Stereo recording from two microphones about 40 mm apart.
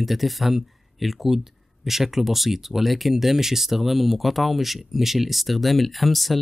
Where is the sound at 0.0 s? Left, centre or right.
Centre.